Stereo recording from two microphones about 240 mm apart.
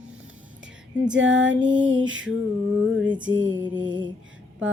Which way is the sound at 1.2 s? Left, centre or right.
Right.